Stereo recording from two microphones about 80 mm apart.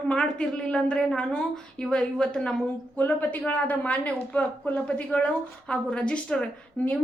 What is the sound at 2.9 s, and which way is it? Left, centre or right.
A woman's voice, left.